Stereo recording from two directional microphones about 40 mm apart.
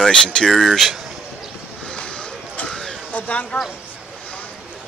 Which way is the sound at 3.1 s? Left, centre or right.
Left.